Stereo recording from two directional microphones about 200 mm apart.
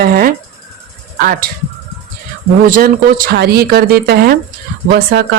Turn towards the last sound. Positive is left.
turn(degrees=-55)  # may be behind; listen again after turning